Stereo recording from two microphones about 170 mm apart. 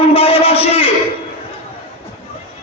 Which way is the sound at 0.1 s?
35° left (ahead or behind).